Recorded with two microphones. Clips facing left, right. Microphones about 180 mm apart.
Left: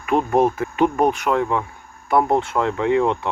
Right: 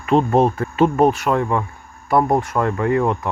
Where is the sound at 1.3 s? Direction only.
5° right (ahead or behind).